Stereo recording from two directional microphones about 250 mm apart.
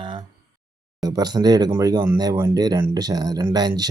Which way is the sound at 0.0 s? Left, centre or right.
Centre.